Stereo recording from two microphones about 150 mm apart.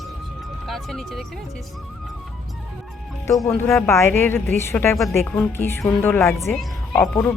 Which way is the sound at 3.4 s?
15° left (ahead or behind).